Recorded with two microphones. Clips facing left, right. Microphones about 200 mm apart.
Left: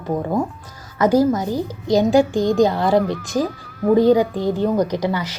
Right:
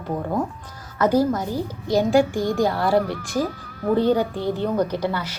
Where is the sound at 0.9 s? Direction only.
10° left (ahead or behind).